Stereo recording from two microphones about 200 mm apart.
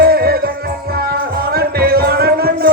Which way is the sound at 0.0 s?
50° right (ahead or behind).